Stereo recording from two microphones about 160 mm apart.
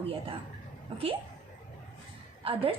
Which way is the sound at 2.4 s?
35° right (ahead or behind).